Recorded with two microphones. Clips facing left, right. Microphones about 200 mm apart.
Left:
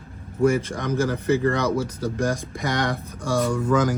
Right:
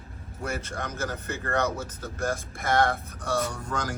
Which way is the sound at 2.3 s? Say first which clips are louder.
Right 1 dB; 15° left (ahead or behind).